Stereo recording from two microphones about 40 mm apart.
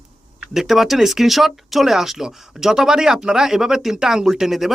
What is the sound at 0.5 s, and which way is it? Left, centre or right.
Speech, centre.